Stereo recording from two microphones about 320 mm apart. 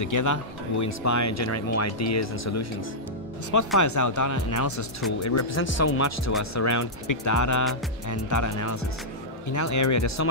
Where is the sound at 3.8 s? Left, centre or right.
Left.